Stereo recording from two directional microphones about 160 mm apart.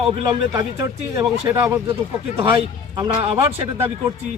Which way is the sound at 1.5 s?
10° right (ahead or behind).